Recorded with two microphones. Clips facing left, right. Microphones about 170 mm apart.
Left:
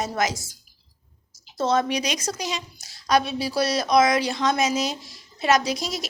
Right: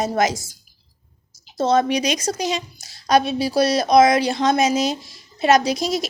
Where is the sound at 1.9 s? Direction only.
20° right (ahead or behind).